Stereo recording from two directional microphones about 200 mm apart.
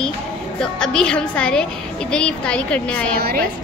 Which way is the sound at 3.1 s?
50° right (ahead or behind).